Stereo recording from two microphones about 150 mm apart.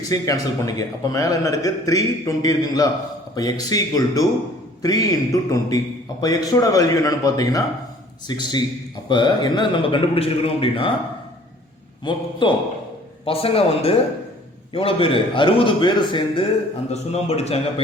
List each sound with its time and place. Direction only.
0.1 s a man's voice: 20° left (ahead or behind); by 10.9 s 40° left (ahead or behind)
12.0 s a man's voice: 35° left (ahead or behind)
16.9 s a man's voice: 45° left (ahead or behind)